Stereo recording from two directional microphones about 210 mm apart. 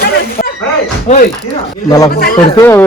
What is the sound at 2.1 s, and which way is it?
Speech, 45° left (ahead or behind).